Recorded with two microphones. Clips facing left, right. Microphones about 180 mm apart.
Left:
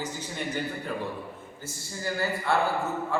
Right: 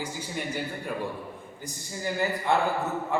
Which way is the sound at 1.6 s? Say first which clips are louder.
Right 1 dB; 15° right (ahead or behind).